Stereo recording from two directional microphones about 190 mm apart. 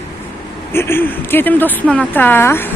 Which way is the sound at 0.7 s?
10° left (ahead or behind).